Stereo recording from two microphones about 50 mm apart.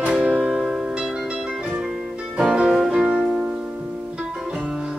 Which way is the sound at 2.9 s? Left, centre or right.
Centre.